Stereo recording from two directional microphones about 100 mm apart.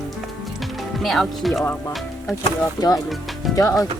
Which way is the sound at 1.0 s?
Centre (ahead or behind).